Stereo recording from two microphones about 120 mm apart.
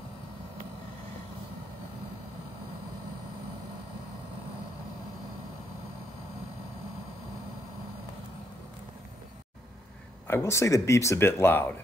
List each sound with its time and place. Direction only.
10.2 s speech: 20° left (ahead or behind)